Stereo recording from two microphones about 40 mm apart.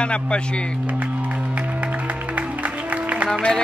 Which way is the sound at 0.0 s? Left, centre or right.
Left.